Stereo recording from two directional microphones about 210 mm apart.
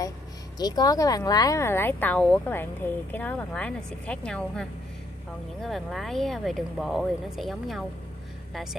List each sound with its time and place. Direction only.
0.6 s speech: 20° left (ahead or behind); by 7.8 s centre (ahead or behind)